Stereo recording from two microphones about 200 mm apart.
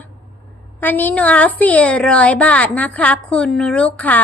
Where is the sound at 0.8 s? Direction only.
10° left (ahead or behind).